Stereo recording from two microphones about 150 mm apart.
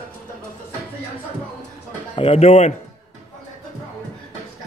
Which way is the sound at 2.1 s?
40° left (ahead or behind).